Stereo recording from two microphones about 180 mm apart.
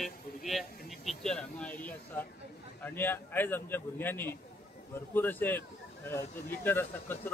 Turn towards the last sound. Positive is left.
turn(degrees=10)  # may be behind; listen again after turning